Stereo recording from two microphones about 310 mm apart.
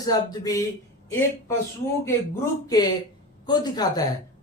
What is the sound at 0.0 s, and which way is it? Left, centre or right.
Speech, centre.